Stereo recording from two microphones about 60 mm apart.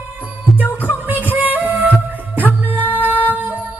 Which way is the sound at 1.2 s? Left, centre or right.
Right.